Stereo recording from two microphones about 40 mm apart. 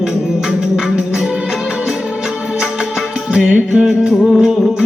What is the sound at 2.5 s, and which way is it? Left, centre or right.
Music, centre.